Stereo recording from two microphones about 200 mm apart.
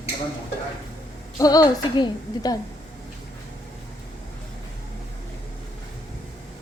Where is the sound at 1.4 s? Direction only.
20° left (ahead or behind).